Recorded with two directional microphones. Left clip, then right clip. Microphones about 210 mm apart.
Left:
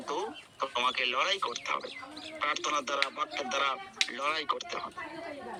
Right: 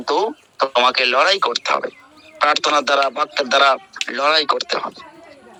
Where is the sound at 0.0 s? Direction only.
40° right (ahead or behind).